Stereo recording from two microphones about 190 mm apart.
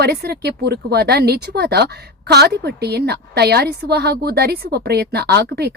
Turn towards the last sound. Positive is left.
turn(degrees=-60)  # may be behind; listen again after turning